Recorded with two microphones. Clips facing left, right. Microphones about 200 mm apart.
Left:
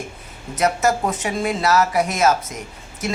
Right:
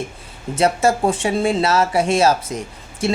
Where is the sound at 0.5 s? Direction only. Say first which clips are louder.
Right 2 dB; 30° right (ahead or behind).